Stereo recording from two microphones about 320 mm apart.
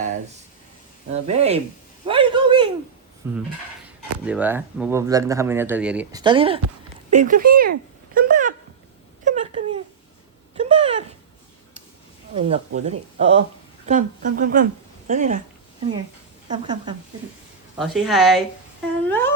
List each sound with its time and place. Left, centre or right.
1.1 s speech: centre
2.0 s a sound: centre
3.2 s speech: centre; by 8.5 s right
9.2 s a sound: right
12.3 s speech: right
16.5 s speech: centre
17.7 s a woman's voice: centre
19.0 s humming: centre